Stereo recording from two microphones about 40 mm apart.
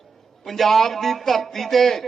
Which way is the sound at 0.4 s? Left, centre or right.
Centre.